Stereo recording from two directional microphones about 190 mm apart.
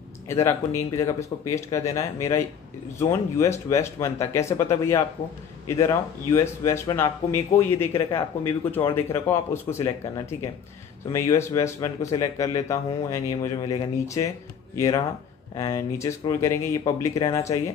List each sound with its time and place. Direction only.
0.3 s speech: 15° left (ahead or behind)